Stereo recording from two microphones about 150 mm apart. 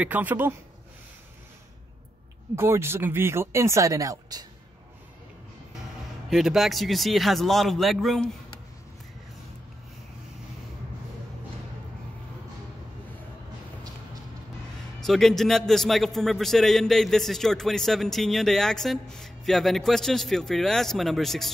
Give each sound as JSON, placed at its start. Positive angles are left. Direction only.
{"t": 0.0, "sound": "speech", "side_deg": -10}
{"t": 2.5, "sound": "speech", "side_deg": -15}
{"t": 6.3, "sound": "a man's voice", "side_deg": 0}
{"t": 15.0, "sound": "a man's voice", "side_deg": 0}